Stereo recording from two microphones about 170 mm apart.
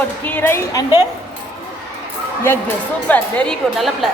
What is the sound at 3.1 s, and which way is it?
A woman's voice, 10° left (ahead or behind).